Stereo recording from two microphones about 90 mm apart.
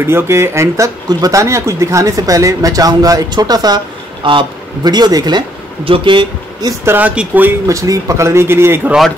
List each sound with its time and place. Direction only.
0.0 s speech: 30° right (ahead or behind); by 3.8 s 45° right (ahead or behind)
4.2 s a man's voice: 70° right (ahead or behind)
4.8 s speech: 50° right (ahead or behind)
5.9 s speech: 65° right (ahead or behind)
6.8 s speech: 20° right (ahead or behind)
7.6 s speech: 40° right (ahead or behind)